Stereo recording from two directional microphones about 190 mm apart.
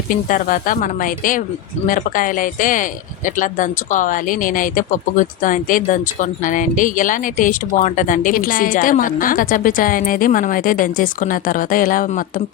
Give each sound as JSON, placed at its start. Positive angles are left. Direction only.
{"t": 0.1, "sound": "speech", "side_deg": 45}